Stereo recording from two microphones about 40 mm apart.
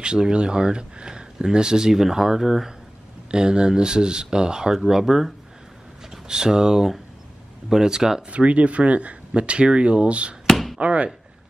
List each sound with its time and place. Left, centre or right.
0.0 s speech: right
8.3 s speech: right
10.5 s chop: centre
10.8 s speech: right